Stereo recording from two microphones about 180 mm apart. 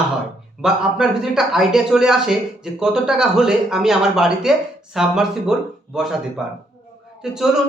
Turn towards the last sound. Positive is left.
turn(degrees=-5)  # may be behind; listen again after turning